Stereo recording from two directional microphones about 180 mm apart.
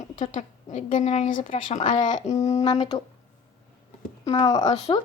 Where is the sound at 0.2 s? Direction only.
45° left (ahead or behind); by 3.0 s 25° left (ahead or behind).